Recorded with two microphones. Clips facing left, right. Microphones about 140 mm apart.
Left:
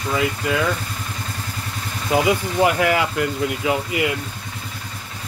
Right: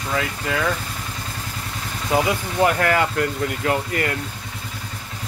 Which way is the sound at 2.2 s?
10° left (ahead or behind).